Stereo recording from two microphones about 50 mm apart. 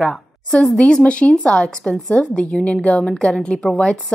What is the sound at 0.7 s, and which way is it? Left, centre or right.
A woman's voice, left.